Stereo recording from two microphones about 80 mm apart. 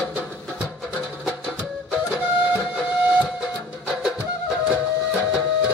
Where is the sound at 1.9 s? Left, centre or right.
Centre.